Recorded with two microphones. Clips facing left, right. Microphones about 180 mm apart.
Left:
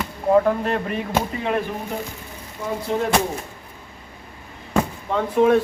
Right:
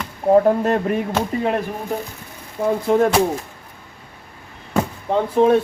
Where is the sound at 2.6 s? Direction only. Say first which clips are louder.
Right 7 dB; 55° right (ahead or behind).